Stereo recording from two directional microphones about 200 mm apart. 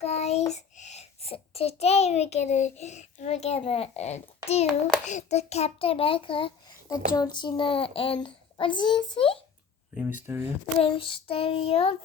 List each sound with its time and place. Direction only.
0.0 s a child's voice: 30° left (ahead or behind)
9.9 s speech: 5° right (ahead or behind)
10.8 s a child's voice: 25° left (ahead or behind)